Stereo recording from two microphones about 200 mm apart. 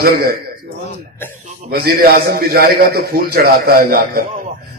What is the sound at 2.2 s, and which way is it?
A man's voice, 50° right (ahead or behind).